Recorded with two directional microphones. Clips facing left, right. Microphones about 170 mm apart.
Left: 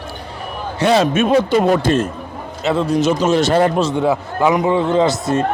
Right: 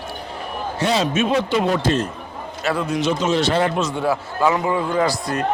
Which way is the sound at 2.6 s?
20° left (ahead or behind).